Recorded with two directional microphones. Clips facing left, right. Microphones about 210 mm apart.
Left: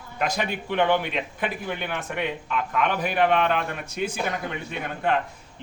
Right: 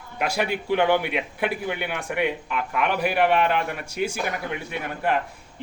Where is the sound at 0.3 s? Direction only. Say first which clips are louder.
Right 5 dB; 10° right (ahead or behind).